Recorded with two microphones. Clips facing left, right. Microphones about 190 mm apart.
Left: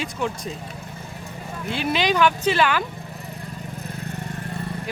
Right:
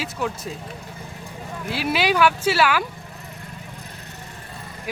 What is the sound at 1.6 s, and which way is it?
Speech, 5° right (ahead or behind).